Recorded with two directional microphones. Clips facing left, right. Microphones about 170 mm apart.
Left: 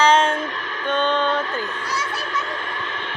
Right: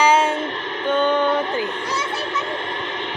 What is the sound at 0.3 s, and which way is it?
Music, 25° right (ahead or behind).